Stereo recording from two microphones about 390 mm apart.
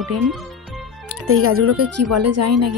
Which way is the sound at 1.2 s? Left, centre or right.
Right.